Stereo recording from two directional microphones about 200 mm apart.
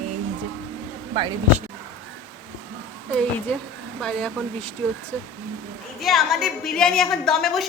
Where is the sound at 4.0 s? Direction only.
5° left (ahead or behind).